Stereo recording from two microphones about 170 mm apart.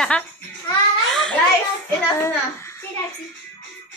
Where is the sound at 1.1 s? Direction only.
Centre (ahead or behind).